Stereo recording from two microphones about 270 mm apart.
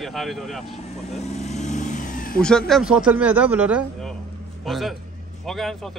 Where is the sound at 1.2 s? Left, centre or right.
Left.